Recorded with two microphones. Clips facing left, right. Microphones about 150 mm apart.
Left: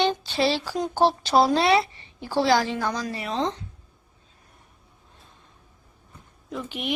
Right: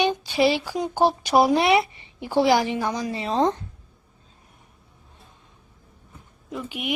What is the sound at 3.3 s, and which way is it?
Speech, 45° right (ahead or behind).